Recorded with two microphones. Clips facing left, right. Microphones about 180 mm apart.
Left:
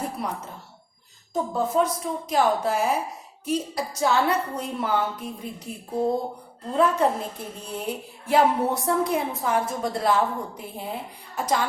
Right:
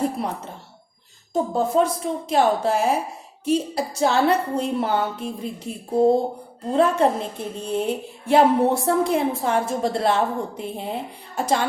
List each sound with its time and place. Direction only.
1.3 s a woman's voice: 30° right (ahead or behind)